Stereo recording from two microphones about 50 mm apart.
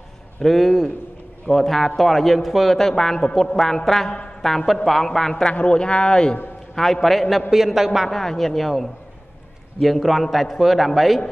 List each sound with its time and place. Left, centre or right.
0.4 s a man's voice: centre
5.3 s a man's voice: left
6.7 s a man's voice: centre
8.1 s a man's voice: centre